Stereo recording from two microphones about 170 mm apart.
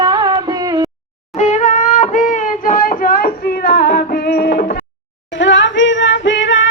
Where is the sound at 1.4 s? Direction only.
45° left (ahead or behind); by 4.8 s 60° left (ahead or behind).